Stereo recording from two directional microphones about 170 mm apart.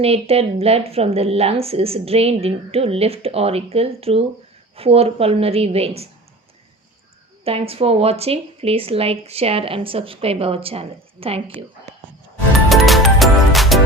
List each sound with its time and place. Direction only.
0.0 s speech: 35° right (ahead or behind)
7.7 s speech: 35° right (ahead or behind)
12.6 s music: centre (ahead or behind)